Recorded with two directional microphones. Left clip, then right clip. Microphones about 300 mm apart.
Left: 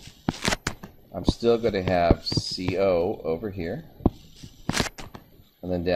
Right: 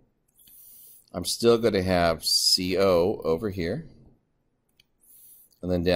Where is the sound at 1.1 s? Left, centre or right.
Right.